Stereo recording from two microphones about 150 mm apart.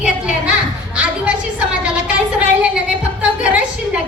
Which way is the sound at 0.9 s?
10° right (ahead or behind).